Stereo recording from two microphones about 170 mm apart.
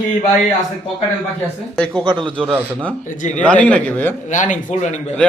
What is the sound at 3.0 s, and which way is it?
Speech, 50° left (ahead or behind).